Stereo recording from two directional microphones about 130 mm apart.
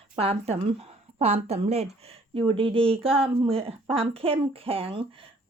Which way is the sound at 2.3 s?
45° right (ahead or behind).